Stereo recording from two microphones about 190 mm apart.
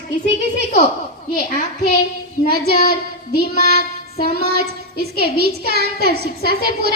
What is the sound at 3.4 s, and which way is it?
Child singing, 50° left (ahead or behind).